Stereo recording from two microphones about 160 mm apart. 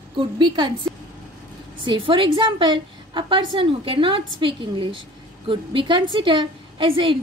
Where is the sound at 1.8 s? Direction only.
30° right (ahead or behind).